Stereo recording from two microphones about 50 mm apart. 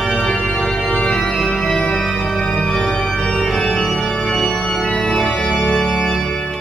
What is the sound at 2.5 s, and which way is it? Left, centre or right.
Organ, centre.